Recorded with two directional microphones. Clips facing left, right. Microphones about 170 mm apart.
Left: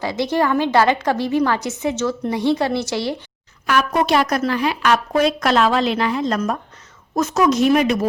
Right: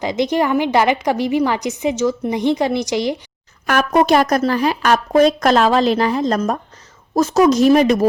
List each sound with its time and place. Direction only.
0.0 s a woman's voice: 20° right (ahead or behind)
3.7 s speech: 45° right (ahead or behind)